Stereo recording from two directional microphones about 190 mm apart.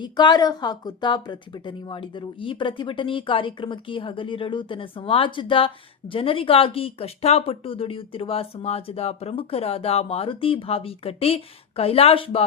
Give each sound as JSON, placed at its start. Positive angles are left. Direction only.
{"t": 0.0, "sound": "a woman's voice", "side_deg": 25}